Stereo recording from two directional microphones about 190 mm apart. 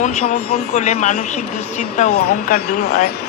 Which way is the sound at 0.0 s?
40° left (ahead or behind).